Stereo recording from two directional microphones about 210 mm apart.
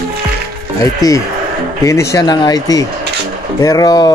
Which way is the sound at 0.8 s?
15° left (ahead or behind).